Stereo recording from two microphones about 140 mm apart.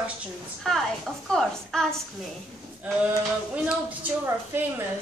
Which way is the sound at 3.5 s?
10° right (ahead or behind).